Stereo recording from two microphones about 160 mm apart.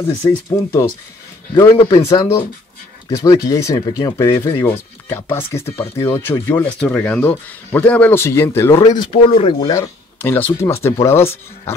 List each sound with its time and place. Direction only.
0.2 s speech: 15° left (ahead or behind)
4.5 s speech: 15° left (ahead or behind)
9.1 s speech: 40° left (ahead or behind)
9.7 s speech: 15° left (ahead or behind)